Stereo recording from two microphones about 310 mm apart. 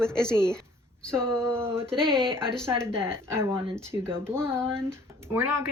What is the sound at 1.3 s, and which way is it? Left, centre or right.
Speech, centre.